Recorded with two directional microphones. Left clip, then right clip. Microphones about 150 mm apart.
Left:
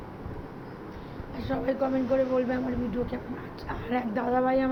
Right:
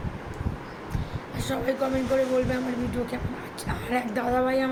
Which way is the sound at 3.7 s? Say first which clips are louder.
Right 2 dB; 20° right (ahead or behind).